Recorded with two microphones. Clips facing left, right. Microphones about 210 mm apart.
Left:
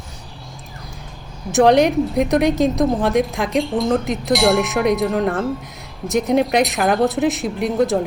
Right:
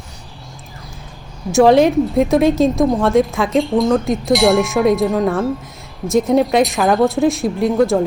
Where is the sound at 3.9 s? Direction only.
20° left (ahead or behind).